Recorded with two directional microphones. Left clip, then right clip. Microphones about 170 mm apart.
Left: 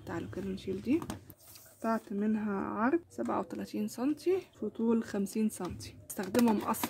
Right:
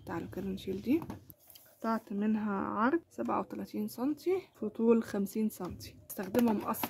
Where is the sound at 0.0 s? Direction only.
20° right (ahead or behind).